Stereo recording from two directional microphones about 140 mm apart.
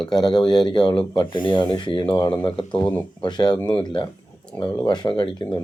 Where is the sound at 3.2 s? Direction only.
30° left (ahead or behind).